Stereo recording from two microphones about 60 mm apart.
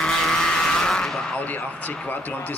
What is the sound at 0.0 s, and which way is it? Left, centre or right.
Vehicle, centre.